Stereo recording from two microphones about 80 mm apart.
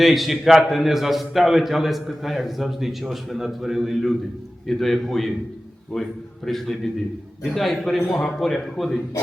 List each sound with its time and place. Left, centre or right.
0.0 s a man's voice: centre